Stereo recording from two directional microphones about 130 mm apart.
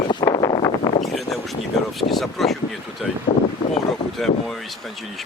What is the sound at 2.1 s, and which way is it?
Speech, centre (ahead or behind).